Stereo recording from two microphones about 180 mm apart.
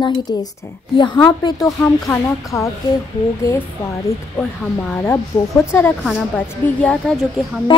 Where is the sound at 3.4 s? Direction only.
15° left (ahead or behind).